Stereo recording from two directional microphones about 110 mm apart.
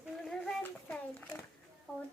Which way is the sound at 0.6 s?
15° left (ahead or behind).